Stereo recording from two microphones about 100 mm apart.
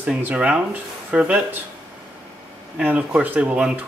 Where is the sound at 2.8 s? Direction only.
15° right (ahead or behind).